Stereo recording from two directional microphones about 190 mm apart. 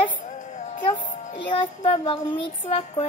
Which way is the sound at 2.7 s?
30° left (ahead or behind).